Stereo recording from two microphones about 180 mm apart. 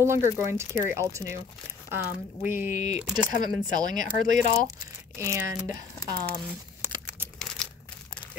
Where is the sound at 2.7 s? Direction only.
40° left (ahead or behind).